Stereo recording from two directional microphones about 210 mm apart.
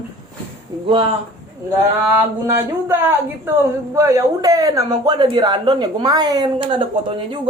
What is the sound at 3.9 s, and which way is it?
Speech, 15° right (ahead or behind).